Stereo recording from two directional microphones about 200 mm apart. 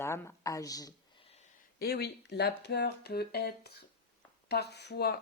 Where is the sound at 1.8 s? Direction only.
50° left (ahead or behind).